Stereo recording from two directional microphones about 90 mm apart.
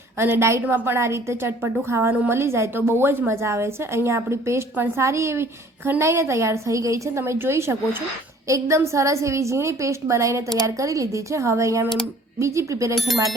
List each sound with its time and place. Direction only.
0.2 s a woman's voice: 25° right (ahead or behind)